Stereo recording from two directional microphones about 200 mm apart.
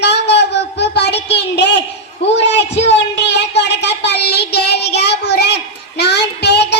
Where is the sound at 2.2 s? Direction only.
60° left (ahead or behind).